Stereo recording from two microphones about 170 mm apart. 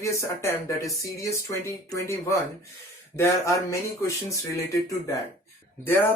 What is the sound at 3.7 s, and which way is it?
Speech, 20° left (ahead or behind).